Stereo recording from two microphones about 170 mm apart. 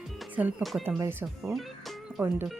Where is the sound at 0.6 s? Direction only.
Centre (ahead or behind).